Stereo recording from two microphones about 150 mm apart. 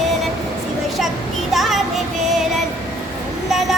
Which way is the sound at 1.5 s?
Centre (ahead or behind).